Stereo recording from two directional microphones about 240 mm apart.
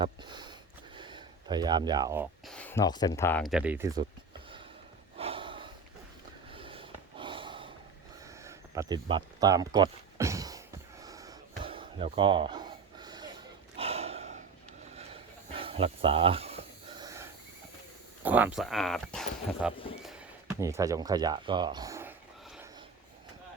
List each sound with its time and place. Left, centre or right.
0.0 s a sound: centre
2.5 s speech: centre
5.1 s snort: right
8.4 s a sound: centre
14.9 s snake: right
18.2 s speech: centre